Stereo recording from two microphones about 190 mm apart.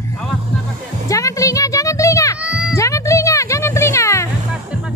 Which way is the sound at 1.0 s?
15° left (ahead or behind).